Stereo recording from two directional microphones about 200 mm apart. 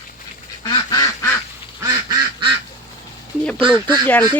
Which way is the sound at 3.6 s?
25° right (ahead or behind).